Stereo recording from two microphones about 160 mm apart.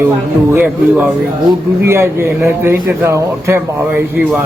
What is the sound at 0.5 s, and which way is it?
Speech, 10° right (ahead or behind).